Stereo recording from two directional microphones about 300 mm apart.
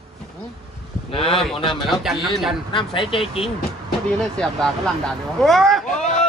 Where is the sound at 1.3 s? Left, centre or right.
Centre.